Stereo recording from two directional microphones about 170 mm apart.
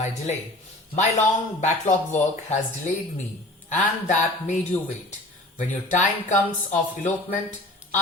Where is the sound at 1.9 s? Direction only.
40° left (ahead or behind).